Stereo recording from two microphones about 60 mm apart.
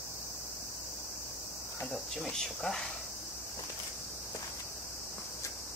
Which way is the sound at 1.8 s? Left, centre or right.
Centre.